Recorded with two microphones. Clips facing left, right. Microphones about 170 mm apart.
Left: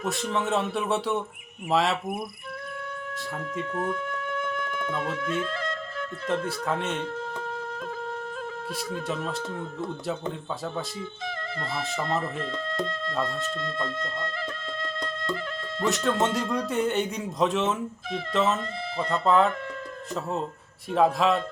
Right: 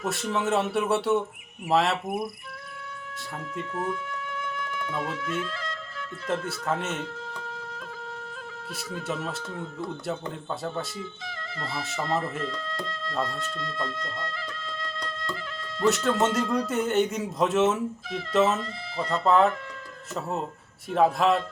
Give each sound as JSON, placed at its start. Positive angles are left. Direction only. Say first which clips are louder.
{"t": 0.1, "sound": "speech", "louder": "right 1 dB", "side_deg": 0}
{"t": 3.8, "sound": "music", "louder": "left 1 dB", "side_deg": 55}
{"t": 6.7, "sound": "speech", "louder": "right 1 dB", "side_deg": 0}
{"t": 7.0, "sound": "music", "louder": "left 4 dB", "side_deg": 55}
{"t": 9.0, "sound": "speech", "louder": "right 1 dB", "side_deg": -5}
{"t": 11.3, "sound": "speech", "louder": "left 3 dB", "side_deg": 55}
{"t": 12.8, "sound": "speech", "louder": "left 4 dB", "side_deg": 55}
{"t": 13.6, "sound": "music", "louder": "left 2 dB", "side_deg": 55}
{"t": 15.8, "sound": "speech", "louder": "right 2 dB", "side_deg": 0}
{"t": 20.9, "sound": "speech", "louder": "even", "side_deg": 0}